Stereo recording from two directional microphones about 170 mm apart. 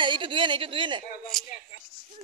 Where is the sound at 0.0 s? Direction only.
30° right (ahead or behind).